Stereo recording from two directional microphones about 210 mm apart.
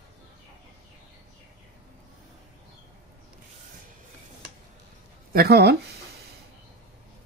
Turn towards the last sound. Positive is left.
turn(degrees=-50)  # may be behind; listen again after turning